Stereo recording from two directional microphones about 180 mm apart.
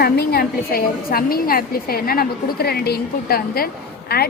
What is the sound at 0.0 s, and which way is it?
A woman's voice, 60° left (ahead or behind).